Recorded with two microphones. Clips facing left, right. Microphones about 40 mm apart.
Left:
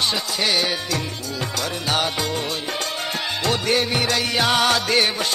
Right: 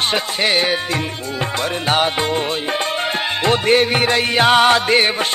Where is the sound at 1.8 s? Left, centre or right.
Right.